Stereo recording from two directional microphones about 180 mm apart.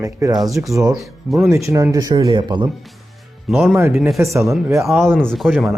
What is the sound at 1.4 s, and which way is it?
Speech, 15° right (ahead or behind).